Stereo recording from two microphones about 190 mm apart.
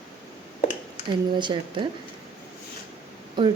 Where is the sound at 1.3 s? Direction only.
25° right (ahead or behind).